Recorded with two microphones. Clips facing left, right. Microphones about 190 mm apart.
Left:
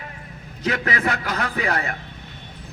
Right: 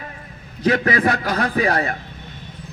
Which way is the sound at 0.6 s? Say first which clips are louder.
Right 6 dB; 30° right (ahead or behind).